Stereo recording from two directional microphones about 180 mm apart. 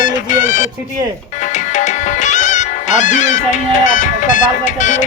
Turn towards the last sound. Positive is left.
turn(degrees=45)  # may be behind; listen again after turning